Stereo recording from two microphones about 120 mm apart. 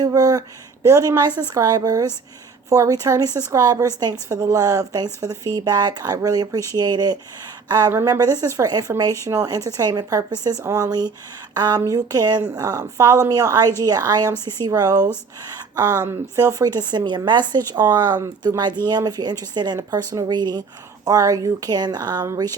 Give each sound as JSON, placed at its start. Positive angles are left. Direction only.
{"t": 0.0, "sound": "a woman's voice", "side_deg": -30}
{"t": 15.5, "sound": "a sound", "side_deg": -30}
{"t": 16.0, "sound": "speech", "side_deg": -20}
{"t": 16.4, "sound": "a woman's voice", "side_deg": -30}